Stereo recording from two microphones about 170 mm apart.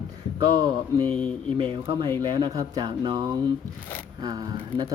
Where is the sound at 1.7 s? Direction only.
25° right (ahead or behind).